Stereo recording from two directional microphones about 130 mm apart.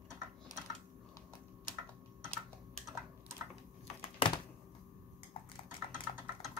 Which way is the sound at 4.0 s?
40° left (ahead or behind).